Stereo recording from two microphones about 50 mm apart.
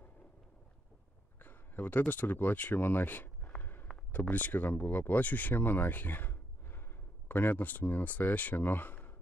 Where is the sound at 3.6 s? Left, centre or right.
Left.